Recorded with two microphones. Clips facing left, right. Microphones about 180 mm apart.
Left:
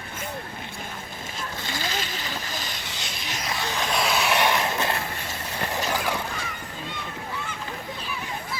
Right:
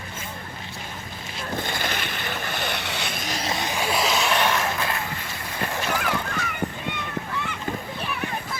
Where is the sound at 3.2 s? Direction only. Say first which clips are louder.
Right 2 dB; 35° right (ahead or behind).